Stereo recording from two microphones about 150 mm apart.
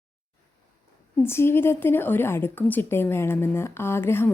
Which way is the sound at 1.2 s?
15° left (ahead or behind).